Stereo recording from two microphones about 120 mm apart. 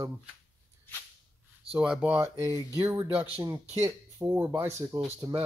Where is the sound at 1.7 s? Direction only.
10° right (ahead or behind).